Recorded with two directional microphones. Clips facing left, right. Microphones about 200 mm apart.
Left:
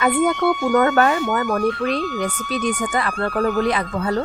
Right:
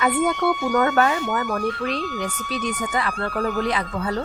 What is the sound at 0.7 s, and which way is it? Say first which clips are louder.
Speech: left 4 dB; 55° left (ahead or behind).